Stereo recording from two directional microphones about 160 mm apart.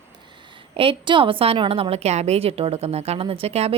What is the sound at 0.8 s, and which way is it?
A woman's voice, 35° right (ahead or behind).